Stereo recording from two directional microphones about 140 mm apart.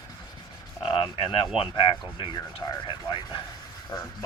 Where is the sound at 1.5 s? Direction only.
35° left (ahead or behind).